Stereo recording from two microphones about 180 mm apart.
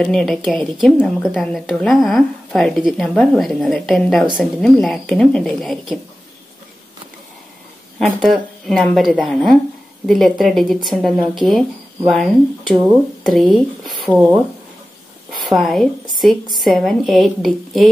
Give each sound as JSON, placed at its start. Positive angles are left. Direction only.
{"t": 0.0, "sound": "a woman's voice", "side_deg": 0}
{"t": 8.2, "sound": "a woman's voice", "side_deg": 0}
{"t": 15.4, "sound": "a woman's voice", "side_deg": 0}